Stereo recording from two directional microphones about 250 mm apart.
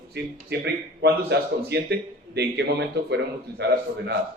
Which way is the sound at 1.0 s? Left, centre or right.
Right.